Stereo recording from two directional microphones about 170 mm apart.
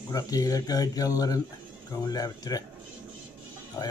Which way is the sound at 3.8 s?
20° left (ahead or behind).